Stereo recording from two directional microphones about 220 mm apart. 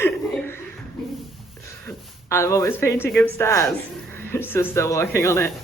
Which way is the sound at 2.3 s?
10° left (ahead or behind).